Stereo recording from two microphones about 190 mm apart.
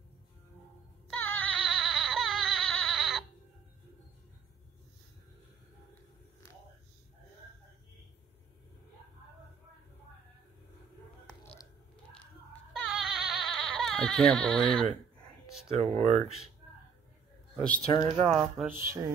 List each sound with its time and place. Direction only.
1.1 s music: 5° left (ahead or behind)
12.7 s a sound: centre (ahead or behind)
15.7 s speech: 30° right (ahead or behind)
17.6 s speech: 5° left (ahead or behind)
18.7 s music: 15° right (ahead or behind)